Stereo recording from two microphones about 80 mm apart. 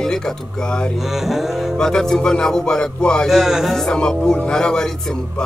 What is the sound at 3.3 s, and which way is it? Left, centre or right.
Speech, centre.